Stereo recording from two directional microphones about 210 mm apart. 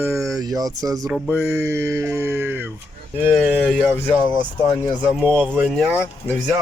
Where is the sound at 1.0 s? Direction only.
5° right (ahead or behind).